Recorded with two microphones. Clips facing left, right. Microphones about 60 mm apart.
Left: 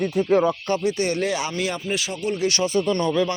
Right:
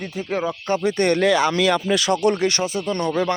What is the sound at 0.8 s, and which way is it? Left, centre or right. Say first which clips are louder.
Speech: right 4 dB; right.